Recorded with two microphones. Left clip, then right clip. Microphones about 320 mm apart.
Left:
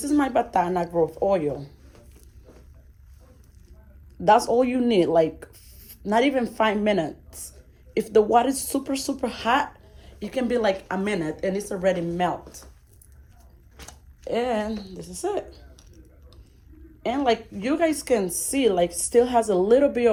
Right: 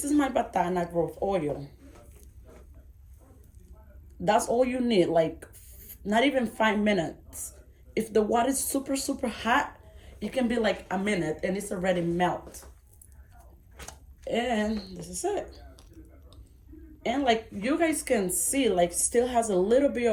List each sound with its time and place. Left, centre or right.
0.0 s speech: centre
4.2 s speech: centre
14.3 s speech: centre
15.7 s a sound: centre
17.0 s speech: centre